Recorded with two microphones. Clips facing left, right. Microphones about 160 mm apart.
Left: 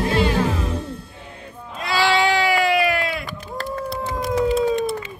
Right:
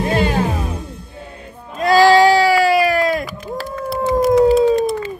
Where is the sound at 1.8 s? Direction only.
40° right (ahead or behind).